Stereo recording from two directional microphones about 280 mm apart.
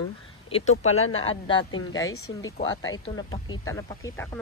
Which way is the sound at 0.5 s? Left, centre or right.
Left.